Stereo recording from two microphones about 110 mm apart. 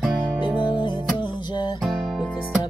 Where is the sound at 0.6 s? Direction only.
45° left (ahead or behind).